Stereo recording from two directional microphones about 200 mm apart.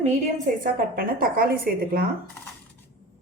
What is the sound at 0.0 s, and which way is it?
A woman's voice, 40° right (ahead or behind).